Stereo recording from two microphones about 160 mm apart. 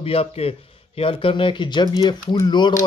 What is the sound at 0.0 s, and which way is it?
A man's voice, 40° left (ahead or behind).